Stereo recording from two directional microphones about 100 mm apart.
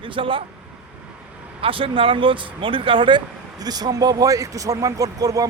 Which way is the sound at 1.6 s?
65° right (ahead or behind).